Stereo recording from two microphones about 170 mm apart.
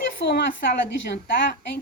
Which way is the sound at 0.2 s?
90° left.